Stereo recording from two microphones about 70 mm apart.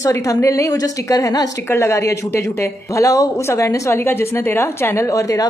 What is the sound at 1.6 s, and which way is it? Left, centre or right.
A woman's voice, left.